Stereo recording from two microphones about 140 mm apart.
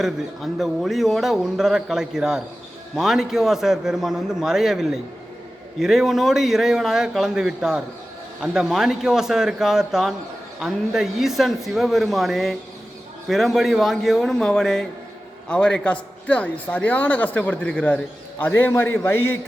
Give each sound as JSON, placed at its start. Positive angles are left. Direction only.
{"t": 0.6, "sound": "a man's voice", "side_deg": 0}